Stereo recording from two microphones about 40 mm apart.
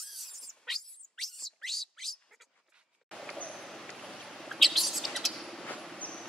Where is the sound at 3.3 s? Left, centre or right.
Left.